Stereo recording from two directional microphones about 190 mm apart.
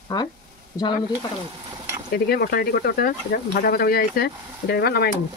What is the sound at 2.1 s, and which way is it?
Speech, 50° left (ahead or behind).